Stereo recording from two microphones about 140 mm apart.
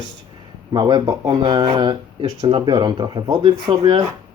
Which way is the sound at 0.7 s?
30° right (ahead or behind).